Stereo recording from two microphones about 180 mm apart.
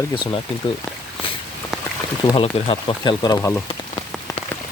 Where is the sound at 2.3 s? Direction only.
30° left (ahead or behind).